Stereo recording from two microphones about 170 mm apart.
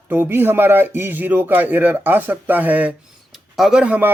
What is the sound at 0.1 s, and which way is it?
Speech, 10° right (ahead or behind).